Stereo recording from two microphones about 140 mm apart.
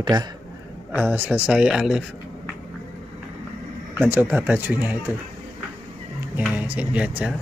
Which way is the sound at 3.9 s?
15° right (ahead or behind).